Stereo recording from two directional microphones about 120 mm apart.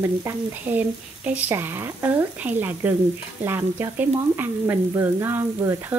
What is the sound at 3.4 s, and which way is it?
Stir, 20° right (ahead or behind).